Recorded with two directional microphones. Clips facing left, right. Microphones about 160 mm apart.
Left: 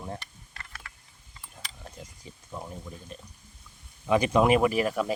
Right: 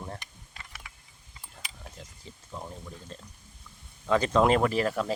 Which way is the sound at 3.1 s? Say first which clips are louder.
Left 1 dB; 15° left (ahead or behind).